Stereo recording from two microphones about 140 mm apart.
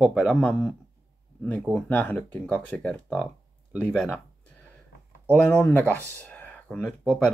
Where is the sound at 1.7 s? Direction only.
10° left (ahead or behind).